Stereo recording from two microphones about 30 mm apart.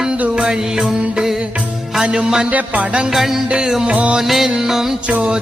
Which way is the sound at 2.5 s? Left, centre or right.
Right.